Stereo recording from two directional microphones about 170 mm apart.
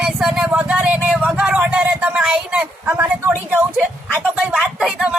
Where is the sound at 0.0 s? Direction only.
5° right (ahead or behind).